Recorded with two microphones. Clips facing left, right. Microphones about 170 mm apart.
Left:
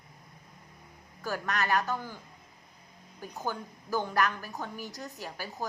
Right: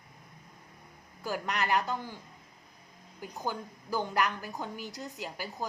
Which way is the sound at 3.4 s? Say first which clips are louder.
Even; 15° right (ahead or behind).